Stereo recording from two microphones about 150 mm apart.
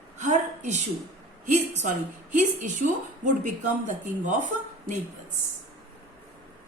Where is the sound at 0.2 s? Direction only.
50° right (ahead or behind).